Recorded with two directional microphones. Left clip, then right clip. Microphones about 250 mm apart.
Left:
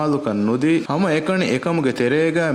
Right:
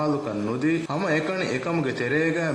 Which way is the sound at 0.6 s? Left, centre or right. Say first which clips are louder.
Left 5 dB; left.